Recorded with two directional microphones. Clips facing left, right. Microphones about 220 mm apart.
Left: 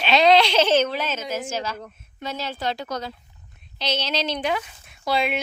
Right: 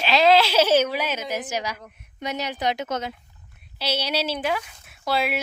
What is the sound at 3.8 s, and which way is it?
Speech, 10° right (ahead or behind).